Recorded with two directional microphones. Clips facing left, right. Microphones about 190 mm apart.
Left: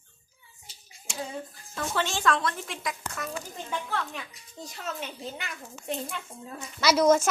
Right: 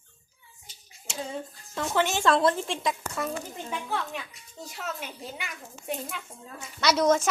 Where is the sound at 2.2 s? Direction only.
30° right (ahead or behind).